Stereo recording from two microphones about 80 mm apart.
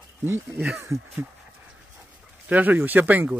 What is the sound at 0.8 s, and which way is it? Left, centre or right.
Speech, right.